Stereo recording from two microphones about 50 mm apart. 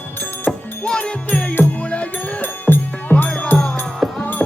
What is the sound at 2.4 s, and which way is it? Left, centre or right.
Music, left.